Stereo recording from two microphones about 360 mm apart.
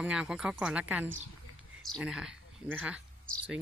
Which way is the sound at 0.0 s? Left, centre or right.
Centre.